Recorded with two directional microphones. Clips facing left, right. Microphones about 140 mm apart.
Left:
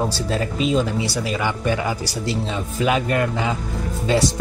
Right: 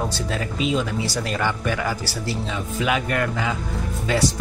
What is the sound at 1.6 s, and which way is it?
Speech, 20° left (ahead or behind).